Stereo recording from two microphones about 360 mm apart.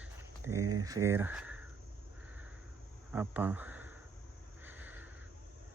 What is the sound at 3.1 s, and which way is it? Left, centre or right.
Speech, centre.